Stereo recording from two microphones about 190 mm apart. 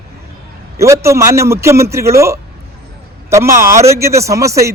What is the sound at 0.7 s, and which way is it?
A man's voice, 15° right (ahead or behind).